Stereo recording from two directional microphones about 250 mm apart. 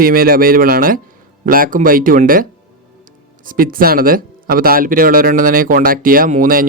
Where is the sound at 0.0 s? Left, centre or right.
Right.